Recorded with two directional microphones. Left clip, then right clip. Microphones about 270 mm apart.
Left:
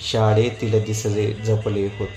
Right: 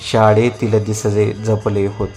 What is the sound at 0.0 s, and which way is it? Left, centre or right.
Speech, right.